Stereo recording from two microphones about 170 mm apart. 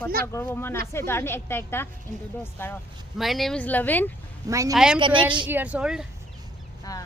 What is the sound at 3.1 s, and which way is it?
Speech, centre (ahead or behind).